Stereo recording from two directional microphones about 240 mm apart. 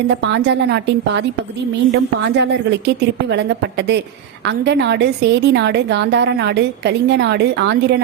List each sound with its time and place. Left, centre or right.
0.2 s a woman's voice: right